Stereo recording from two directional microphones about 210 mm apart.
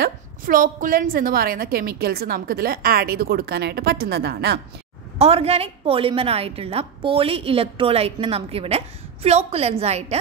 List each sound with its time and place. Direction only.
0.0 s a woman's voice: 40° right (ahead or behind)
5.2 s a woman's voice: 30° right (ahead or behind)